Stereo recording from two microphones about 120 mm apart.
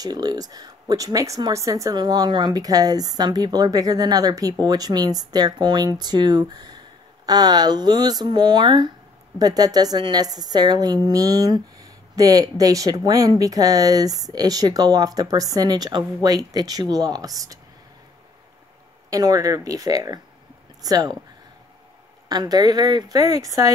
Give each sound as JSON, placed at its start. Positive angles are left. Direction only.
{"t": 0.0, "sound": "a woman's voice", "side_deg": -35}
{"t": 19.0, "sound": "a woman's voice", "side_deg": -30}
{"t": 22.3, "sound": "a woman's voice", "side_deg": -35}